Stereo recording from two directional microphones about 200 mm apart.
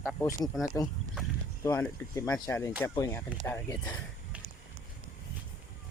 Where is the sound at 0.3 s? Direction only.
15° left (ahead or behind).